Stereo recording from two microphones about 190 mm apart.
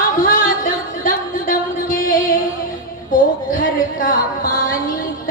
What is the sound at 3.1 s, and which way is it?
Music, 45° left (ahead or behind).